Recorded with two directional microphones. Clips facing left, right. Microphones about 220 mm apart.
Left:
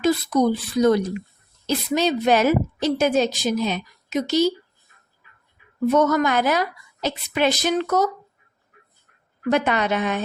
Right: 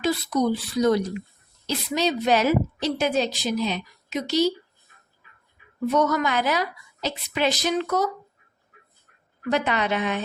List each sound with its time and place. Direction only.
0.0 s a woman's voice: 50° left (ahead or behind)
5.9 s a woman's voice: 50° left (ahead or behind)
9.5 s a woman's voice: 50° left (ahead or behind)